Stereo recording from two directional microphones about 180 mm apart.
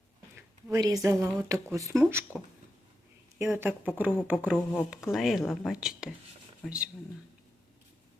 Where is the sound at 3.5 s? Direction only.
10° right (ahead or behind).